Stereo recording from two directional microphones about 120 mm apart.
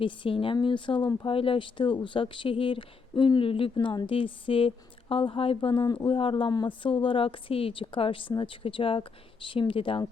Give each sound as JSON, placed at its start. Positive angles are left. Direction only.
{"t": 0.0, "sound": "speech", "side_deg": 45}